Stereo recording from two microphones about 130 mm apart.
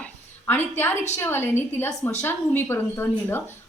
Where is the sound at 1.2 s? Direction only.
15° left (ahead or behind).